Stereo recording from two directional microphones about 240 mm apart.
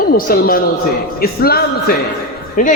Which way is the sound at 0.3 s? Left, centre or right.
Left.